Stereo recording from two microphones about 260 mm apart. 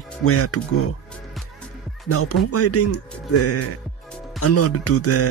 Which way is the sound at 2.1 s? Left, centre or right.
Left.